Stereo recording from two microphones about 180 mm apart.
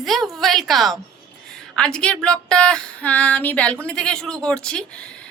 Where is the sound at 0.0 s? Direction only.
Centre (ahead or behind).